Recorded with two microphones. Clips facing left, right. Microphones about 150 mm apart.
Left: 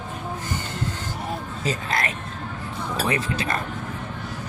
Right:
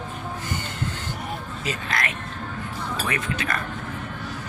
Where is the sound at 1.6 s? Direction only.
35° left (ahead or behind).